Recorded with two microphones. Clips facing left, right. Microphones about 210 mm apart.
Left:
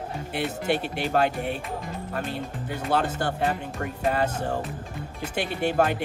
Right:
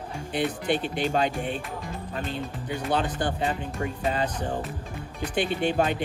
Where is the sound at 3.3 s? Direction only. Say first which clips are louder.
Left 1 dB; 55° left (ahead or behind).